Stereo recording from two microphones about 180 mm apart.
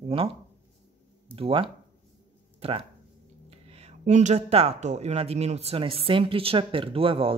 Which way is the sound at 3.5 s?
35° right (ahead or behind).